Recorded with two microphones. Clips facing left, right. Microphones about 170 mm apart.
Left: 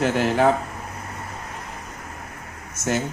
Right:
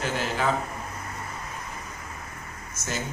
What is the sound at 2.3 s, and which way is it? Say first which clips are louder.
Air conditioning: left 2 dB; 65° left (ahead or behind).